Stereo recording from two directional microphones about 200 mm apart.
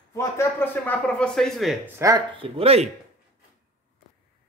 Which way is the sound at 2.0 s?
20° right (ahead or behind).